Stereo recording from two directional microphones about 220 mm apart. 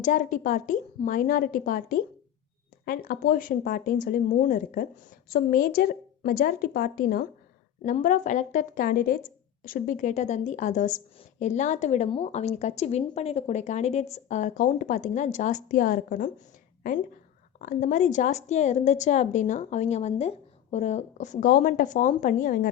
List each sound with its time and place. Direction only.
0.0 s speech: 35° left (ahead or behind)
17.6 s speech: 35° left (ahead or behind)